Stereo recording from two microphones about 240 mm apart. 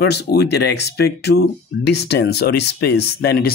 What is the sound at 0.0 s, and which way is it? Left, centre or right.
Speech, left.